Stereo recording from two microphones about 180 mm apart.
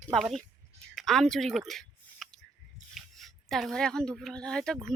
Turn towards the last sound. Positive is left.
turn(degrees=5)  # may be behind; listen again after turning